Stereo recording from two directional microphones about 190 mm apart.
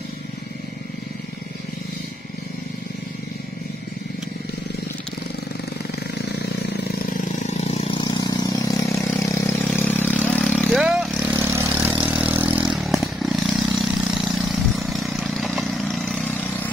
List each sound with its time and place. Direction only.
7.3 s vehicle: 35° left (ahead or behind)
8.0 s vehicle: 20° left (ahead or behind)